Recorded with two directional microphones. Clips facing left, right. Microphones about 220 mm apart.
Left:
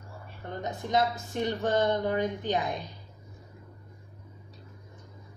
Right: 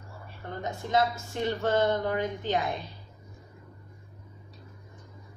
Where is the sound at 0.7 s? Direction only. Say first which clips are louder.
Right 1 dB; 20° left (ahead or behind).